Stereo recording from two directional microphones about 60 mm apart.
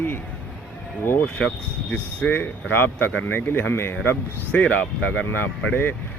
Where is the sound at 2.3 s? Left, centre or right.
Left.